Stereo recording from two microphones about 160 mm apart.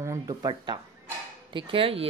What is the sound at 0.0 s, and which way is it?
A woman's voice, 20° right (ahead or behind).